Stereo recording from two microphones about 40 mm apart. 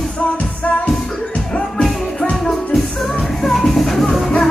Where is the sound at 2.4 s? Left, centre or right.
Centre.